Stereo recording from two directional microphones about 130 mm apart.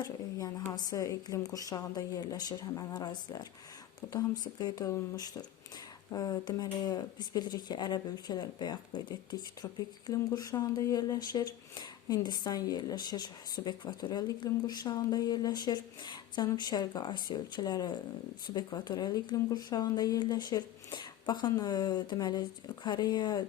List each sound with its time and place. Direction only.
0.0 s a woman's voice: 30° left (ahead or behind)